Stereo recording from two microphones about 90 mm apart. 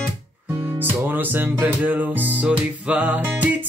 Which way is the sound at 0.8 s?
20° right (ahead or behind).